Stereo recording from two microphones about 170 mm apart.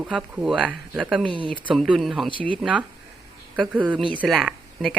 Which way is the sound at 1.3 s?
30° right (ahead or behind).